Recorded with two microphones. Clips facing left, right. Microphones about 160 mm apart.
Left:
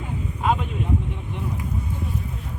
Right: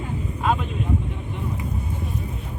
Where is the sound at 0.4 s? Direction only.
10° left (ahead or behind).